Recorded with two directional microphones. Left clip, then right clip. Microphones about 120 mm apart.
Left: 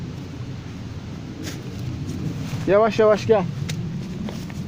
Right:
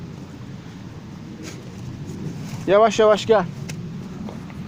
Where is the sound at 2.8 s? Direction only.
5° left (ahead or behind).